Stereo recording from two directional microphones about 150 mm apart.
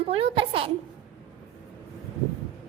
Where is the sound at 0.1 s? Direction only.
40° right (ahead or behind).